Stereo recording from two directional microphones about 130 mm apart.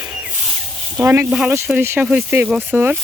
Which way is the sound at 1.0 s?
20° right (ahead or behind).